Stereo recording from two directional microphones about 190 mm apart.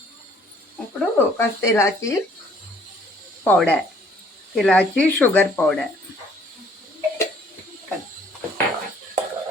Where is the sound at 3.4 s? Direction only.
10° left (ahead or behind).